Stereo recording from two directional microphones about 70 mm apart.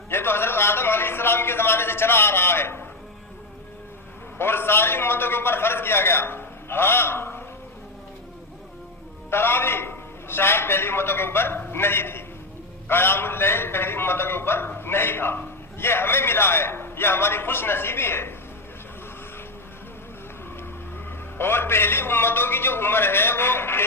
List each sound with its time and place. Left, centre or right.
0.1 s a sound: left
4.4 s a man's voice: left
9.3 s a man's voice: left
21.3 s a man's voice: left